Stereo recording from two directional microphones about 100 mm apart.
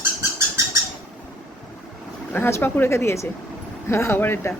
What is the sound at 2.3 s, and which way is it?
Speech, 20° left (ahead or behind).